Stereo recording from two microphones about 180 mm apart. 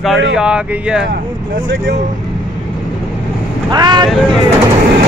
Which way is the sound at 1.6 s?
90° right.